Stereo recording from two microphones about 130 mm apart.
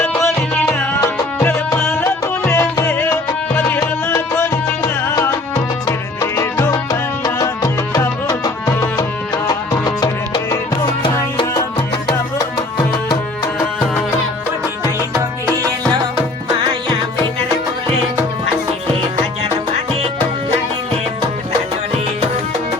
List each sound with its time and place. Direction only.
1.0 s music: 20° left (ahead or behind)
12.4 s music: 30° left (ahead or behind)